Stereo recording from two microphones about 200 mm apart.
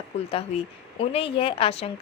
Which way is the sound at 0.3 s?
30° left (ahead or behind).